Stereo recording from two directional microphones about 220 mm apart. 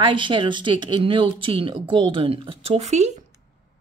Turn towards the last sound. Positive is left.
turn(degrees=-30)  # may be behind; listen again after turning